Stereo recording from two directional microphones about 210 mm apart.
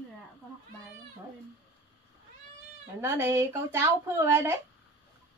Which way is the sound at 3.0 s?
10° right (ahead or behind).